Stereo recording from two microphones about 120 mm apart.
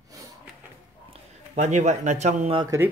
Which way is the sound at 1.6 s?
75° right (ahead or behind).